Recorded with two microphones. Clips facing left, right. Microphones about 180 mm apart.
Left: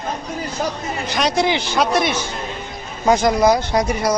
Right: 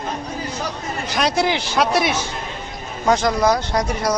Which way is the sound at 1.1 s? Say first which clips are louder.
Left 1 dB; 5° right (ahead or behind).